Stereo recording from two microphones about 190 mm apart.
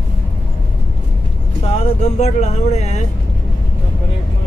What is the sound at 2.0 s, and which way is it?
Speech, 35° left (ahead or behind).